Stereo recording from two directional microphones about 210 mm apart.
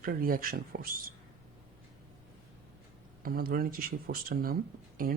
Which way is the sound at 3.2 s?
45° right (ahead or behind).